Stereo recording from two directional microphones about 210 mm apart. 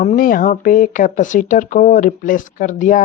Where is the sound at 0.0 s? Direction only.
35° left (ahead or behind).